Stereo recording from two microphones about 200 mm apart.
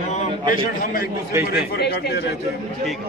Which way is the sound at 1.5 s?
55° left (ahead or behind).